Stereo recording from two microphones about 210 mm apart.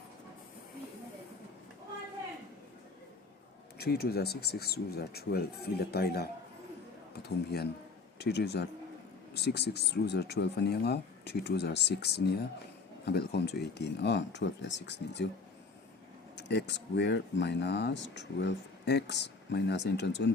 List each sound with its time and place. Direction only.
3.8 s a man's voice: 50° left (ahead or behind)
16.4 s speech: 55° left (ahead or behind)